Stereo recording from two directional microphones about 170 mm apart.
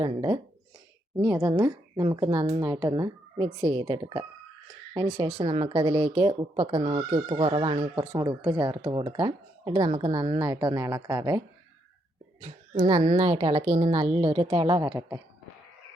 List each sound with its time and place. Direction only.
0.0 s speech: 30° right (ahead or behind)
12.4 s speech: 35° right (ahead or behind); by 15.2 s 20° right (ahead or behind)